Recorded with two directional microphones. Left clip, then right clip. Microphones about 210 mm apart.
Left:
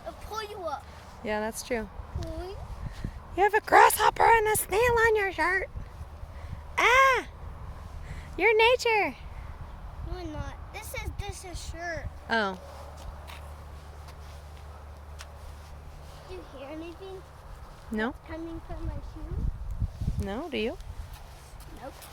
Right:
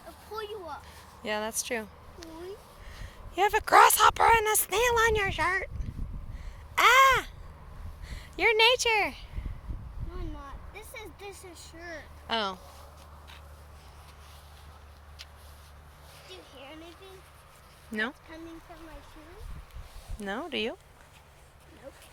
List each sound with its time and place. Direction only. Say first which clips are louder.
1.2 s speech: left 1 dB; centre (ahead or behind)
3.3 s speech: left 1 dB; centre (ahead or behind)
6.7 s a sound: right 1 dB; centre (ahead or behind)
8.1 s speech: left 2 dB; 5° left (ahead or behind)
12.3 s speech: left 3 dB; 15° left (ahead or behind)
17.9 s speech: even; 15° left (ahead or behind)
18.3 s speech: left 6 dB; 30° right (ahead or behind)
20.2 s speech: even; centre (ahead or behind)